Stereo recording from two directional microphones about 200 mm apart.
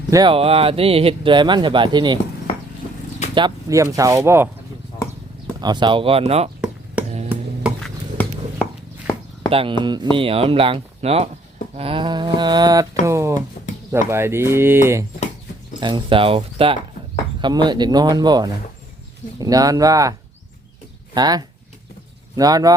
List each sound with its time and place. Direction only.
0.1 s speech: 20° right (ahead or behind)
3.3 s speech: 20° right (ahead or behind)
5.5 s speech: 20° right (ahead or behind)
7.8 s a sound: 5° left (ahead or behind)
9.5 s speech: 25° right (ahead or behind)
15.8 s speech: 25° right (ahead or behind)